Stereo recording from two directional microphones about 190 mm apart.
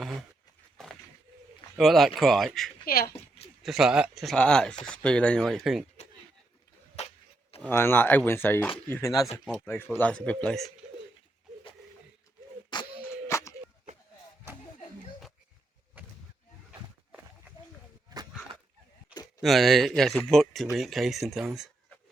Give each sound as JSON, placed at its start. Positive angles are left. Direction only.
{"t": 1.7, "sound": "speech", "side_deg": 0}
{"t": 2.8, "sound": "speech", "side_deg": 50}
{"t": 3.6, "sound": "speech", "side_deg": 0}
{"t": 7.0, "sound": "a sound", "side_deg": 35}
{"t": 7.6, "sound": "speech", "side_deg": 10}
{"t": 9.4, "sound": "speech", "side_deg": 0}
{"t": 12.7, "sound": "a sound", "side_deg": 20}
{"t": 19.4, "sound": "speech", "side_deg": 0}